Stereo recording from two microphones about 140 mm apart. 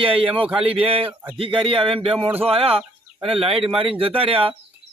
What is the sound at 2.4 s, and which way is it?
Speech, 45° right (ahead or behind).